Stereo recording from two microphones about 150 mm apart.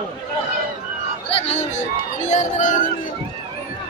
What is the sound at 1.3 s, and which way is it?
Speech, 45° left (ahead or behind).